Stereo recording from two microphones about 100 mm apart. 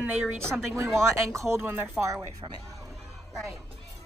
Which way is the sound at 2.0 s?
10° right (ahead or behind).